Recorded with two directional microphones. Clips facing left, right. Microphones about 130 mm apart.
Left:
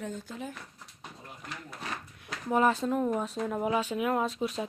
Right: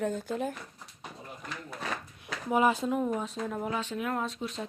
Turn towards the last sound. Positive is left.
turn(degrees=5)  # may be behind; listen again after turning